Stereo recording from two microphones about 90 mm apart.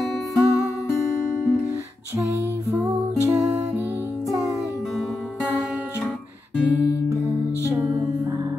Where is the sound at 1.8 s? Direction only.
35° right (ahead or behind).